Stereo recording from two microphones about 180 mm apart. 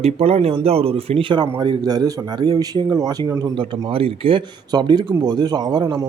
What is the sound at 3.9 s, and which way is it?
Speech, 30° right (ahead or behind).